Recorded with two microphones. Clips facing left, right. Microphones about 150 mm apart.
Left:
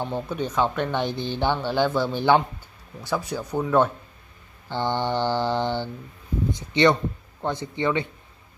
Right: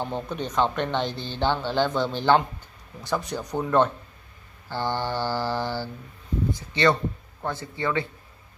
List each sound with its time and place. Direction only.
0.0 s speech: 10° left (ahead or behind)
4.6 s mantra: 20° left (ahead or behind)